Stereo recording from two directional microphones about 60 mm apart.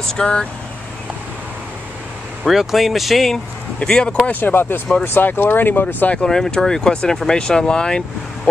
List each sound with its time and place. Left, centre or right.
0.0 s speech: centre
2.4 s speech: centre
3.8 s speech: centre
4.3 s speech: left
6.1 s speech: centre